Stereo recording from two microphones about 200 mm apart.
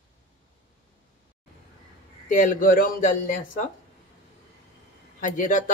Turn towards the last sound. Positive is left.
turn(degrees=40)  # may be behind; listen again after turning